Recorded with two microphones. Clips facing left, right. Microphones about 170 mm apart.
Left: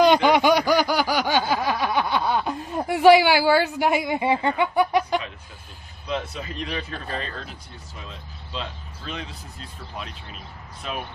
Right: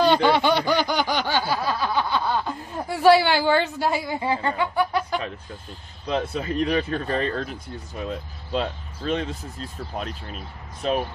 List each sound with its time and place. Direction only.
0.0 s snicker: 15° left (ahead or behind)
6.3 s speech: 45° right (ahead or behind)